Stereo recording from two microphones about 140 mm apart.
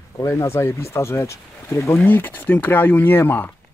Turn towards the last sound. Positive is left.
turn(degrees=15)  # may be behind; listen again after turning